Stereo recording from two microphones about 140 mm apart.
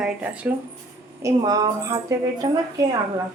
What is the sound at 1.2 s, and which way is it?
A woman's voice, 25° right (ahead or behind).